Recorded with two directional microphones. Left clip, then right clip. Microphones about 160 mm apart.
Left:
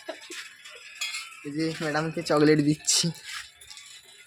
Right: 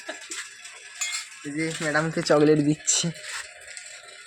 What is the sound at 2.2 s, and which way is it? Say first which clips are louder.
Speech: right 5 dB; 35° right (ahead or behind).